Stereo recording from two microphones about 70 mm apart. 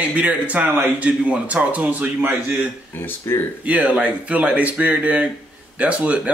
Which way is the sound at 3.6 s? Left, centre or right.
Right.